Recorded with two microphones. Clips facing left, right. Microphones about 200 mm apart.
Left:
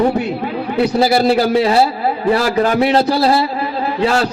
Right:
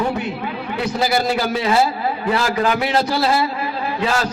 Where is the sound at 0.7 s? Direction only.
30° left (ahead or behind).